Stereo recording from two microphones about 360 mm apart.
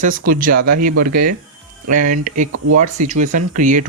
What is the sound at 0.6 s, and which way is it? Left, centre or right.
Speech, right.